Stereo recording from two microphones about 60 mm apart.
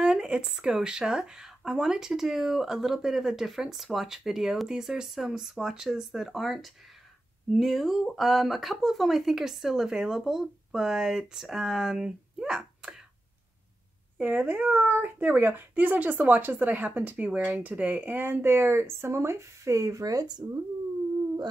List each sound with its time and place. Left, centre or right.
0.0 s speech: centre
14.1 s speech: right